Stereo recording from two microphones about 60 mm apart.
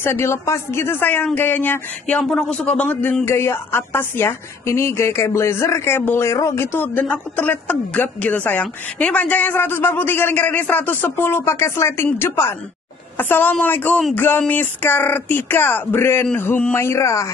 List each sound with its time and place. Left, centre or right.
0.0 s a woman's voice: left
1.3 s speech: left
2.2 s speech: centre
2.6 s a man's voice: centre
2.9 s speech: left
3.3 s a woman's voice: left
6.2 s speech: left
6.6 s a woman's voice: left